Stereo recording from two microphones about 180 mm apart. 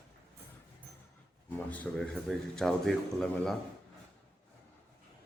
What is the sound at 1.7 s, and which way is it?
A man's voice, 10° left (ahead or behind).